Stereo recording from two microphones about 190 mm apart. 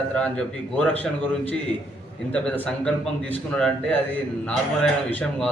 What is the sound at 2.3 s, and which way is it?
Speech, 5° left (ahead or behind).